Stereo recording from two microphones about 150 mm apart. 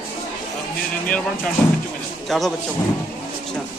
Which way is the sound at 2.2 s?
Centre (ahead or behind).